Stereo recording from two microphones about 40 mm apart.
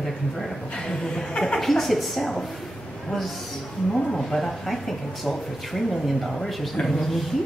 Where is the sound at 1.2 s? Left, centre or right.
Centre.